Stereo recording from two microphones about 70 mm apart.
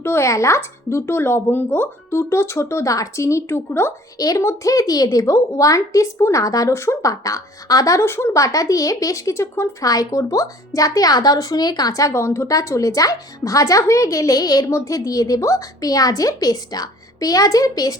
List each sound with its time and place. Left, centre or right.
0.0 s speech: left
4.2 s a woman's voice: left
6.4 s a woman's voice: left
6.7 s speech: left
7.1 s a woman's voice: left
8.0 s a woman's voice: left
9.8 s a woman's voice: left
11.9 s a woman's voice: left
14.7 s a woman's voice: left